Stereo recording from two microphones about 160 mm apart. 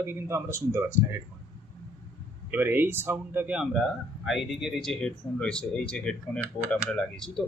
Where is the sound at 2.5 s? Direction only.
15° right (ahead or behind); by 7.4 s 5° left (ahead or behind).